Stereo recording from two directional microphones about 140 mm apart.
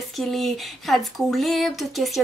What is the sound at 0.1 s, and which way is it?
Speech, centre (ahead or behind).